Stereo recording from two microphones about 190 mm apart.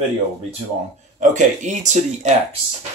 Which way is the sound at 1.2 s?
40° right (ahead or behind).